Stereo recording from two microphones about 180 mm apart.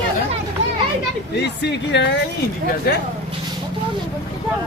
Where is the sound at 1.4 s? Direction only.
70° left (ahead or behind).